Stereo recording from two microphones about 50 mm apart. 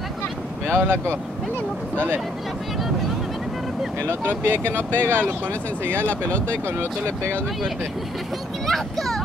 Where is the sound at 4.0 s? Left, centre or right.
Right.